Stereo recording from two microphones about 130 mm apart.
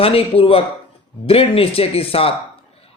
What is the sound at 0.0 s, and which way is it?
A man's voice, 45° left (ahead or behind).